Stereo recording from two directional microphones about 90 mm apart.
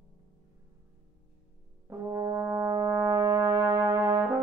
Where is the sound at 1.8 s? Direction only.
35° right (ahead or behind).